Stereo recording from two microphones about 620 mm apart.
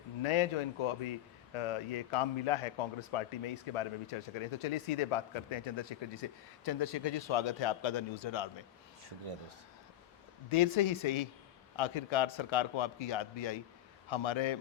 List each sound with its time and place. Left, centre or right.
0.2 s a man's voice: left
9.0 s speech: right
10.5 s a man's voice: left